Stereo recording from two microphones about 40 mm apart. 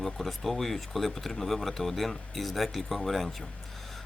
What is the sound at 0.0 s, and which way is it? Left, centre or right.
Speech, centre.